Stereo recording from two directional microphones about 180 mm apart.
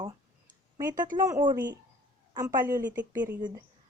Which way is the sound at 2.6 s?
50° right (ahead or behind).